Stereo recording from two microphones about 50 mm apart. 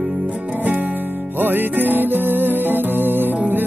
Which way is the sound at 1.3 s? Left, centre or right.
Right.